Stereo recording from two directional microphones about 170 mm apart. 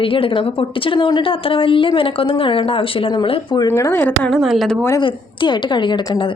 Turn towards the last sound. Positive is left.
turn(degrees=25)  # may be behind; listen again after turning